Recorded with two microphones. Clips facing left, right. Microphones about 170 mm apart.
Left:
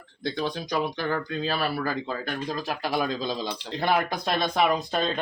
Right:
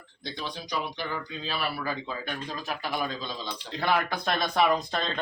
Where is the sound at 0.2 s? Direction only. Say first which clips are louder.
Left 8 dB; 50° left (ahead or behind); by 4.5 s 25° left (ahead or behind).